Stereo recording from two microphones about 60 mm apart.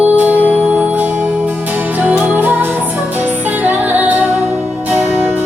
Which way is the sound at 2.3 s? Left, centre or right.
Right.